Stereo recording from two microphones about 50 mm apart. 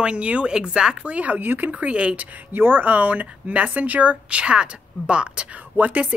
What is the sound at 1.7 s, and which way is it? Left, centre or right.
Speech, right.